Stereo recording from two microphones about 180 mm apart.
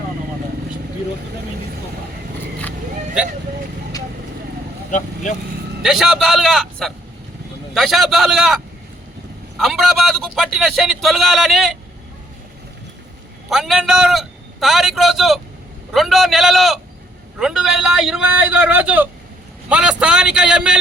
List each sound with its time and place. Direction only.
4.9 s speech: 45° left (ahead or behind)
5.8 s a man's voice: centre (ahead or behind)
13.5 s a man's voice: centre (ahead or behind)